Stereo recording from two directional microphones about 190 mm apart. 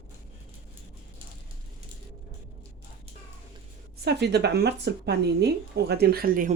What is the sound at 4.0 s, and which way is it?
A woman's voice, 60° right (ahead or behind).